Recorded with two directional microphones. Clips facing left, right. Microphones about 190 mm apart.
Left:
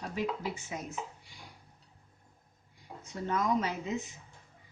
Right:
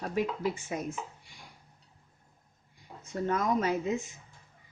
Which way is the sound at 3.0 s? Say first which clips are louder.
Right 3 dB; 50° right (ahead or behind).